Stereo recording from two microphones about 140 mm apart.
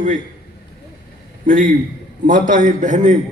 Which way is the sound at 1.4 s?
75° right (ahead or behind).